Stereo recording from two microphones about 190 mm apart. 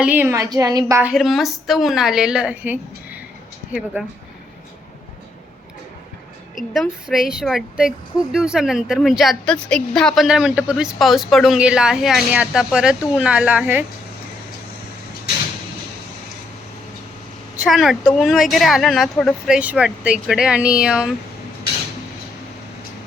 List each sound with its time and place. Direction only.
0.0 s a woman's voice: 10° right (ahead or behind)
1.1 s speech: centre (ahead or behind)
6.6 s speech: centre (ahead or behind)
17.6 s speech: centre (ahead or behind)